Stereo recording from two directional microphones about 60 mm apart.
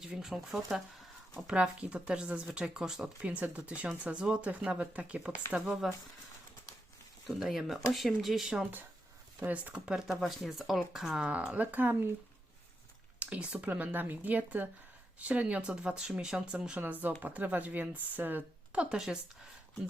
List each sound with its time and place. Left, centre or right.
0.0 s speech: centre
1.5 s speech: centre
3.2 s speech: right
5.5 s speech: centre
7.3 s speech: centre
9.4 s speech: right
9.9 s speech: centre
11.3 s speech: right
13.1 s speech: right
16.6 s speech: right
18.7 s speech: centre